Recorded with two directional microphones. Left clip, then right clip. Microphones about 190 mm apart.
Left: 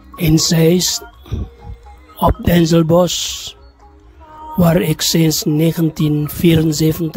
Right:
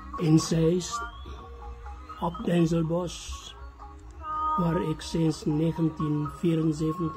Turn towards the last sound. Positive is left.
turn(degrees=50)  # may be behind; listen again after turning